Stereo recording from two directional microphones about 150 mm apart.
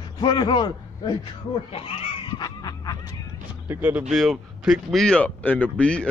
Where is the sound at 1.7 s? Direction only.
40° left (ahead or behind).